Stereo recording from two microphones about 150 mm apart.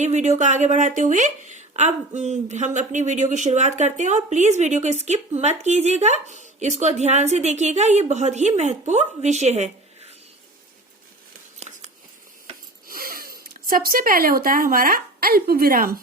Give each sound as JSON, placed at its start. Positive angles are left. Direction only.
{"t": 0.0, "sound": "speech", "side_deg": -50}
{"t": 11.7, "sound": "a sound", "side_deg": -45}
{"t": 12.9, "sound": "speech", "side_deg": -70}